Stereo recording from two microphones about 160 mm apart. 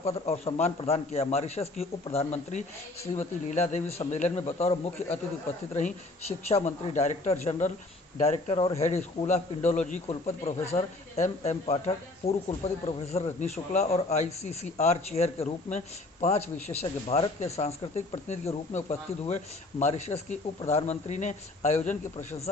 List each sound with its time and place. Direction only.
0.0 s speech: 40° left (ahead or behind)